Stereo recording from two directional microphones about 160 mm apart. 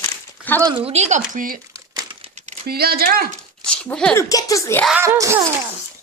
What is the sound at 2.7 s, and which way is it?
Speech, 75° right (ahead or behind).